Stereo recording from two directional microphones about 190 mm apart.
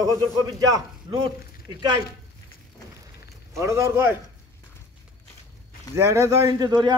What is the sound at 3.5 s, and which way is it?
Speech, 15° right (ahead or behind).